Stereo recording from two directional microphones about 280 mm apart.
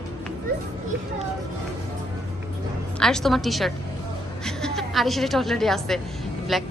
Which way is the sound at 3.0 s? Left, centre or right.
Centre.